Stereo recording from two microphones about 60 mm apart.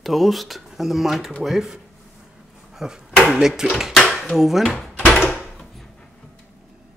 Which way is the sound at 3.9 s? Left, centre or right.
Centre.